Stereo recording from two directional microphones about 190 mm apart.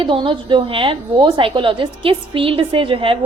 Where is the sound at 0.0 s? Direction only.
25° right (ahead or behind).